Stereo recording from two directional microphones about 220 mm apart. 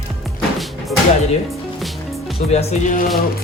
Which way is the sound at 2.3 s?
30° left (ahead or behind).